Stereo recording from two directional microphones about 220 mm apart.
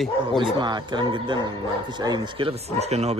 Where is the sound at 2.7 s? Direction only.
30° right (ahead or behind).